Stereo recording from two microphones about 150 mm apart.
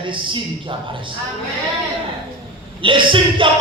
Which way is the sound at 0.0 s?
35° right (ahead or behind).